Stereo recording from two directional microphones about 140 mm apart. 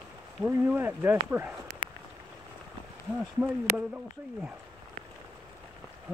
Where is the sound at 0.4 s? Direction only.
10° right (ahead or behind).